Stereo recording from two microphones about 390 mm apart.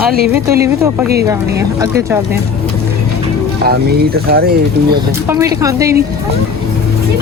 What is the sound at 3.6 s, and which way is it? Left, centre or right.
Speech, right.